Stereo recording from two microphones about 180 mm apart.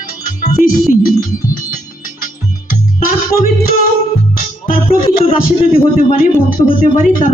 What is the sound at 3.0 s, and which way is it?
Music, 50° left (ahead or behind).